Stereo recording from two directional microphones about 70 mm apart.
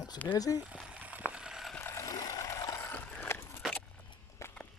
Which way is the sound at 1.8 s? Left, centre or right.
Left.